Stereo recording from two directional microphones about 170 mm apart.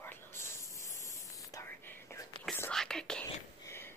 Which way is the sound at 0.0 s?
15° left (ahead or behind).